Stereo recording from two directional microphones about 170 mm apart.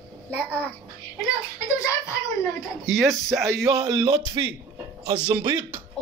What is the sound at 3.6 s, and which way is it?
Speech, 20° right (ahead or behind).